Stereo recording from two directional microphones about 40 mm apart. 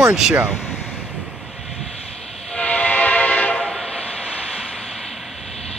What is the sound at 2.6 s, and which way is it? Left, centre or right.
Train, left.